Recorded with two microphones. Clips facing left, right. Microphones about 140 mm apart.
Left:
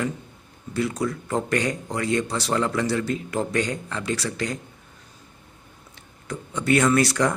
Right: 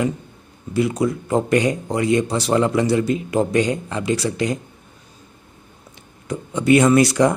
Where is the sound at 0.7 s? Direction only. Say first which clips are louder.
Right 6 dB; 15° right (ahead or behind).